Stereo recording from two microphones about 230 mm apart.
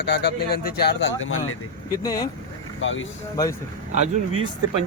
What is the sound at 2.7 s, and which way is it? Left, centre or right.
Speech, left.